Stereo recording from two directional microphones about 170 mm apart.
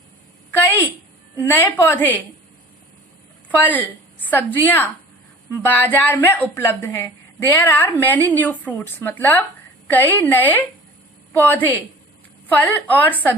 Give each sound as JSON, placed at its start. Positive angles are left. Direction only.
{"t": 1.4, "sound": "a woman's voice", "side_deg": 10}
{"t": 3.6, "sound": "a woman's voice", "side_deg": 10}